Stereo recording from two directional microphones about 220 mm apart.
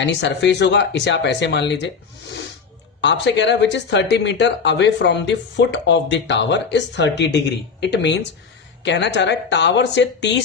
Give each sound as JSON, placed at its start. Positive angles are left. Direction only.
{"t": 0.0, "sound": "speech", "side_deg": 55}
{"t": 3.0, "sound": "speech", "side_deg": 55}